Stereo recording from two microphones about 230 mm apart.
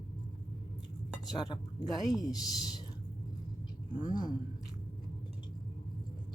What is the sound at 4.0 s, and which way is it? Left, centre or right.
Speech, centre.